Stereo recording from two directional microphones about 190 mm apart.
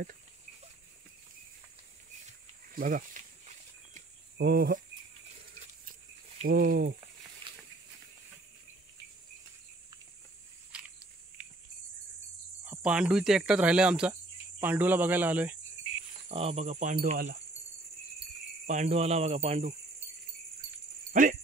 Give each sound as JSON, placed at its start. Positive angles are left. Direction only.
{"t": 2.2, "sound": "snake", "side_deg": -45}
{"t": 4.4, "sound": "speech", "side_deg": -55}
{"t": 6.4, "sound": "speech", "side_deg": -50}
{"t": 7.5, "sound": "a sound", "side_deg": -25}
{"t": 10.7, "sound": "biting", "side_deg": -5}
{"t": 12.6, "sound": "speech", "side_deg": -5}
{"t": 16.3, "sound": "speech", "side_deg": -30}
{"t": 18.7, "sound": "speech", "side_deg": -35}
{"t": 21.1, "sound": "speech", "side_deg": -45}